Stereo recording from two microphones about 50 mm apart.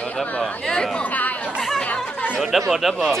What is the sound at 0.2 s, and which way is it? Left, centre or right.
Chatter, centre.